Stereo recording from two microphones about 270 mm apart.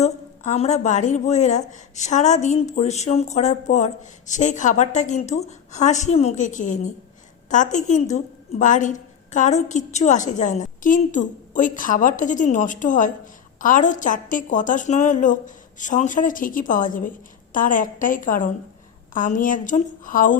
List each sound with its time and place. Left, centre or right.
0.0 s a woman's voice: left